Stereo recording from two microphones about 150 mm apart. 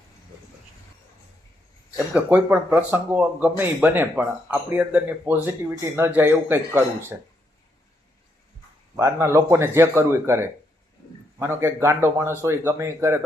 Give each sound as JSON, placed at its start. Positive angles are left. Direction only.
{"t": 2.1, "sound": "speech", "side_deg": -10}
{"t": 9.0, "sound": "speech", "side_deg": -15}